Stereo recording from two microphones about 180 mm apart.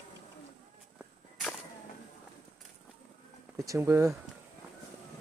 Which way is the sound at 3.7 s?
15° right (ahead or behind).